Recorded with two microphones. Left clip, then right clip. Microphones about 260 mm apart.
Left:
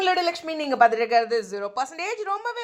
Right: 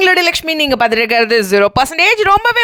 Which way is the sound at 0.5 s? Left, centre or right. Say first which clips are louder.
Right 12 dB; right.